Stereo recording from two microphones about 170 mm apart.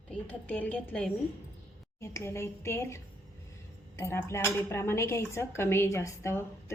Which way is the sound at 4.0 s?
15° left (ahead or behind).